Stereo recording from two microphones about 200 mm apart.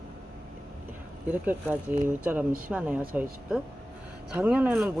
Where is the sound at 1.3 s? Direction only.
10° right (ahead or behind).